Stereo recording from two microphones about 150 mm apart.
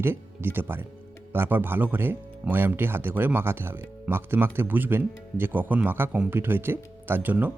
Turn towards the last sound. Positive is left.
turn(degrees=-10)  # may be behind; listen again after turning